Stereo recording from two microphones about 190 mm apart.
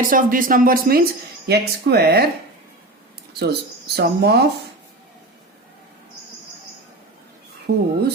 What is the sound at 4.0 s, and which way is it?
Speech, 60° right (ahead or behind).